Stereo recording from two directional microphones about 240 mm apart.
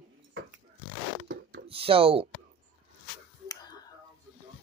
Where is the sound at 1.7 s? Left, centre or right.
Right.